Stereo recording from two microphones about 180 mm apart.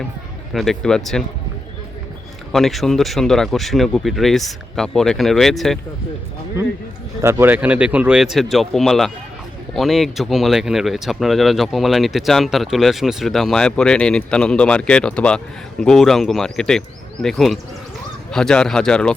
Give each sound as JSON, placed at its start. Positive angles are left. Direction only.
{"t": 0.5, "sound": "speech", "side_deg": 0}
{"t": 2.5, "sound": "speech", "side_deg": 0}
{"t": 7.2, "sound": "speech", "side_deg": -15}